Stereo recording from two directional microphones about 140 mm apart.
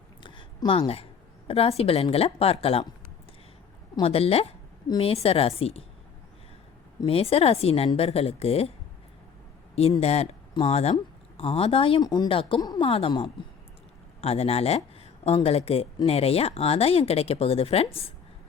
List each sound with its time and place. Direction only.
0.2 s a sound: 35° left (ahead or behind)
1.5 s speech: 45° left (ahead or behind)
4.0 s speech: 45° left (ahead or behind)
7.0 s speech: 45° left (ahead or behind)
10.0 s speech: 50° left (ahead or behind)
12.5 s a woman's voice: 30° left (ahead or behind)
12.9 s speech: 40° left (ahead or behind)